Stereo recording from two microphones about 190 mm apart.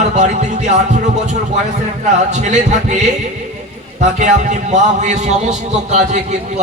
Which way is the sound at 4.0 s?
40° right (ahead or behind).